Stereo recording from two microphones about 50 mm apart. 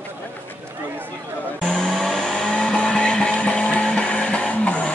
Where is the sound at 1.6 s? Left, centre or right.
Centre.